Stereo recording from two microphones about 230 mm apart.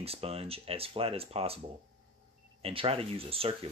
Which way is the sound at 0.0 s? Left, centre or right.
Right.